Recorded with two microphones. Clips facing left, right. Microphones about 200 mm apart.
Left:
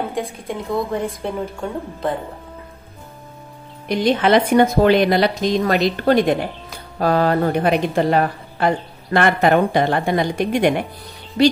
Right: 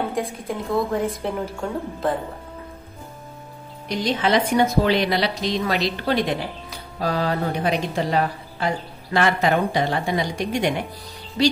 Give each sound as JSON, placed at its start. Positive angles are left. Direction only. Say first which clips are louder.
{"t": 0.1, "sound": "a woman's voice", "louder": "left 1 dB", "side_deg": 0}
{"t": 3.9, "sound": "a woman's voice", "louder": "left 5 dB", "side_deg": 55}